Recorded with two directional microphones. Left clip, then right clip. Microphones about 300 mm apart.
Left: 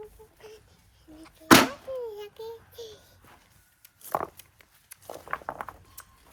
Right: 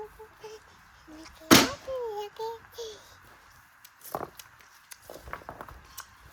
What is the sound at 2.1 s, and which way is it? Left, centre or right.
Child singing, centre.